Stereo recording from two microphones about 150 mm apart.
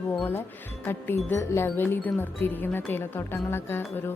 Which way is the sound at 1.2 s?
15° left (ahead or behind).